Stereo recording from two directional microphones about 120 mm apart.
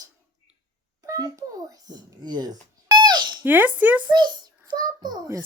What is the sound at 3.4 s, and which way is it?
Speech, 15° right (ahead or behind).